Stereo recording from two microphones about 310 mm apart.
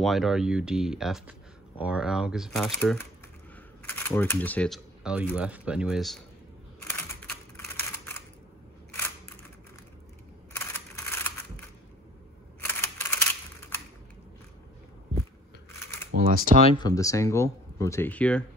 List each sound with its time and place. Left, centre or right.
0.0 s speech: centre
6.8 s camera: centre
10.5 s scissors: centre
12.5 s camera: centre
16.1 s speech: right
16.6 s speech: centre